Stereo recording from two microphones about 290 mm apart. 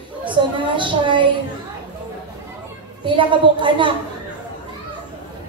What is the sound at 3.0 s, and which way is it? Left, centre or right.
Speech, centre.